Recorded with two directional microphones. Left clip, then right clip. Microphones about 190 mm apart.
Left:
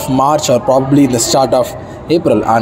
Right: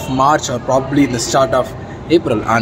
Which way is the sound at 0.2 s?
15° left (ahead or behind).